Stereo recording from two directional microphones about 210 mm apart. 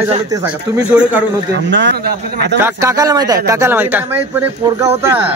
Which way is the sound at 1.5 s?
60° right (ahead or behind).